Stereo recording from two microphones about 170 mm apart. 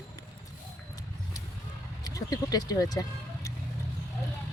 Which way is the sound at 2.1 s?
20° left (ahead or behind).